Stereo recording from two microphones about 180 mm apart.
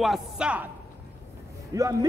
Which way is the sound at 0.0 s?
5° right (ahead or behind).